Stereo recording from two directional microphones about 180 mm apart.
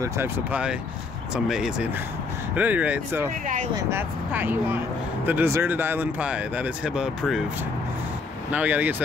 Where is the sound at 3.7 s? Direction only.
15° right (ahead or behind).